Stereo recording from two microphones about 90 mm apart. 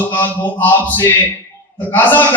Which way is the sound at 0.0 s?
20° left (ahead or behind).